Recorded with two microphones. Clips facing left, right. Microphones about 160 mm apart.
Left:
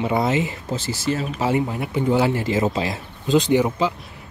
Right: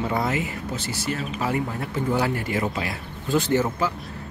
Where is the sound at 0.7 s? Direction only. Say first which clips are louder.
Left 3 dB; 90° left.